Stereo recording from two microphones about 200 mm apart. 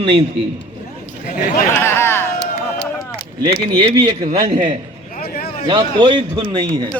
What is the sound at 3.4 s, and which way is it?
A man's voice, 25° right (ahead or behind).